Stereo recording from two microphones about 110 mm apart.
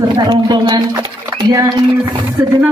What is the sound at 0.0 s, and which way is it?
Speech, 40° right (ahead or behind).